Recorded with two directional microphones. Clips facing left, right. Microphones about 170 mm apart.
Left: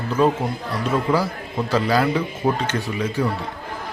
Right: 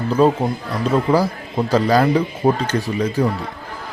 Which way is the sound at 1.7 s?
40° right (ahead or behind).